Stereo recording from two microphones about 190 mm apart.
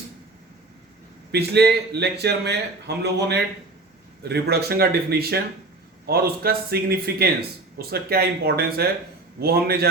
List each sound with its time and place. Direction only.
1.3 s a man's voice: 55° right (ahead or behind)